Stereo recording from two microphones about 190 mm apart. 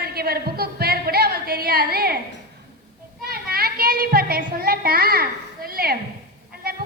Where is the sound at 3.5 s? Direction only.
50° right (ahead or behind).